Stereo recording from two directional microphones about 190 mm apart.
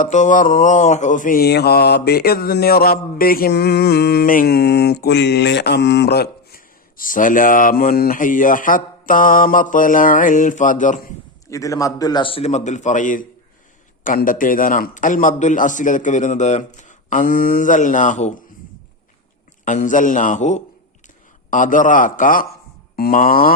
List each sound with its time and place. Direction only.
0.0 s mantra: 40° left (ahead or behind)
11.4 s a man's voice: 15° left (ahead or behind); by 13.2 s 45° left (ahead or behind)
14.0 s mantra: 45° left (ahead or behind)
19.6 s mantra: 40° left (ahead or behind)